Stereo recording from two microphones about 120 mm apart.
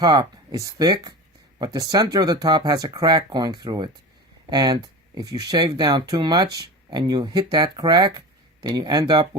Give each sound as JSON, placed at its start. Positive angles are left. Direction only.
{"t": 0.0, "sound": "speech", "side_deg": -35}